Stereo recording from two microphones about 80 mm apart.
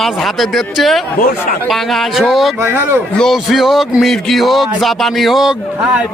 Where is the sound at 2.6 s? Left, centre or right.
Right.